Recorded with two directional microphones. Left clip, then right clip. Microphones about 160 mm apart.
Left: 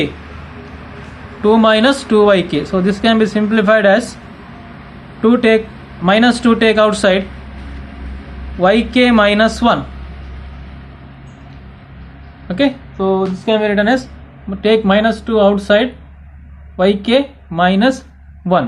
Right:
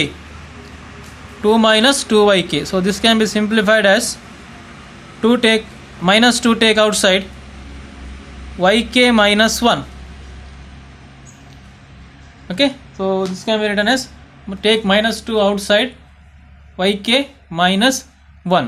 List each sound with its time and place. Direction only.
1.4 s speech: 30° right (ahead or behind)
5.2 s speech: 35° right (ahead or behind)
8.5 s speech: 30° right (ahead or behind)
12.5 s speech: 35° right (ahead or behind)